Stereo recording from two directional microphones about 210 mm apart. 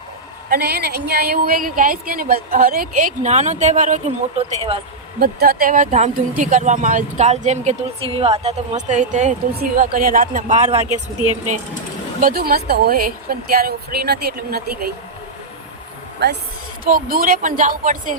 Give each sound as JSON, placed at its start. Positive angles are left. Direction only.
{"t": 0.5, "sound": "a woman's voice", "side_deg": -50}
{"t": 5.2, "sound": "speech", "side_deg": -45}
{"t": 12.2, "sound": "a woman's voice", "side_deg": -45}
{"t": 16.2, "sound": "a woman's voice", "side_deg": -50}
{"t": 16.8, "sound": "speech", "side_deg": -40}